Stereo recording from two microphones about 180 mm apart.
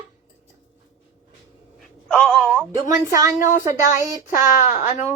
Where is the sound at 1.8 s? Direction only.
Centre (ahead or behind).